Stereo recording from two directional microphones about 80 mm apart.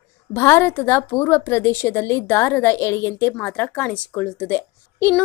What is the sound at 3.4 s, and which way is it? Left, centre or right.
A woman's voice, centre.